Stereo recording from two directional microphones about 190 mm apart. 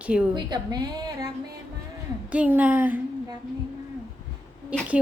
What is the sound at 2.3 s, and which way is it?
Speech, 10° right (ahead or behind).